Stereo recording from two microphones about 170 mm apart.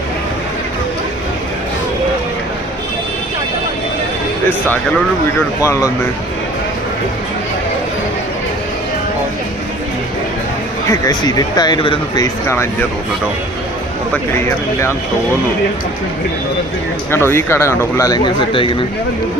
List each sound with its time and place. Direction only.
4.4 s a man's voice: 10° left (ahead or behind)
10.8 s speech: 20° left (ahead or behind)
14.3 s a man's voice: 15° left (ahead or behind)
17.1 s a man's voice: 15° left (ahead or behind); by 18.8 s 30° left (ahead or behind)